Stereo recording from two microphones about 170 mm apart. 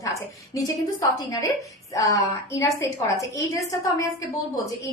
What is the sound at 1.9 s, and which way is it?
A woman's voice, 20° left (ahead or behind).